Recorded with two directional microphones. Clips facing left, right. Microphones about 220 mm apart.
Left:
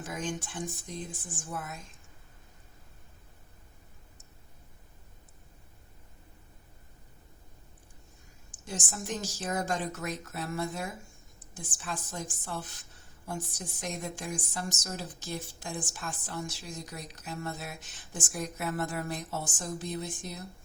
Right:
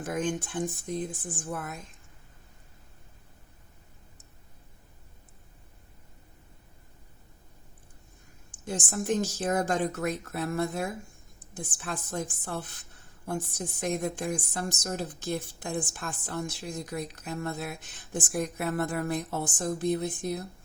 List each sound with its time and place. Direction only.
0.0 s a woman's voice: 55° right (ahead or behind)
8.6 s a woman's voice: 55° right (ahead or behind)